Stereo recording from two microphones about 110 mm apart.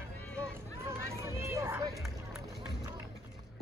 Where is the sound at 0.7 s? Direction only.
25° right (ahead or behind).